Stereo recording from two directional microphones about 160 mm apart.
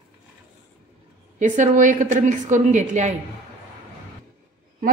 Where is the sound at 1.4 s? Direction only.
50° right (ahead or behind).